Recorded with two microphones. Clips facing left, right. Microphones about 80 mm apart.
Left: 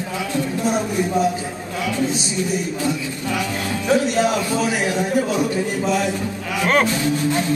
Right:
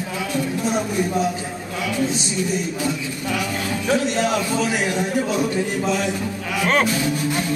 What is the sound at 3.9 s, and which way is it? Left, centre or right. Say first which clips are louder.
A man's voice: left 3 dB; centre.